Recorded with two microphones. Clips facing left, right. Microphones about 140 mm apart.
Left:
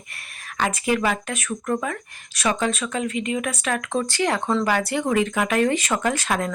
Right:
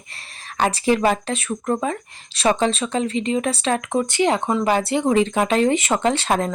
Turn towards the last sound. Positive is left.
turn(degrees=-30)  # may be behind; listen again after turning